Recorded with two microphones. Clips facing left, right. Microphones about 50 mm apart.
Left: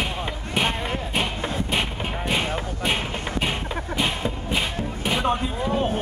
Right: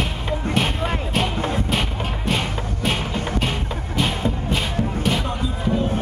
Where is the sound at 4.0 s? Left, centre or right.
Centre.